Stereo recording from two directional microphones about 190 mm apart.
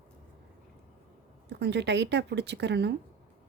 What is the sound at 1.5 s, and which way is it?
Speech, 65° right (ahead or behind).